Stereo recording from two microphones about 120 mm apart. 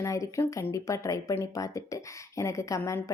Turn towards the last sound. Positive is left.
turn(degrees=25)  # may be behind; listen again after turning